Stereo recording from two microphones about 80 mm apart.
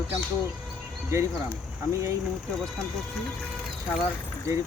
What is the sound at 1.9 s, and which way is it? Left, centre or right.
Speech, right.